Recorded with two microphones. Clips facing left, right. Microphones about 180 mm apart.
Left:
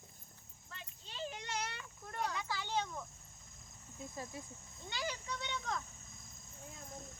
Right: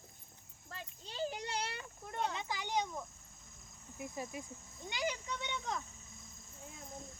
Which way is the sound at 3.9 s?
15° right (ahead or behind).